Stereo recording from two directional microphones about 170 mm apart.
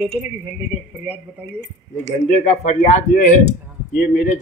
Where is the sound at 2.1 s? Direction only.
45° left (ahead or behind).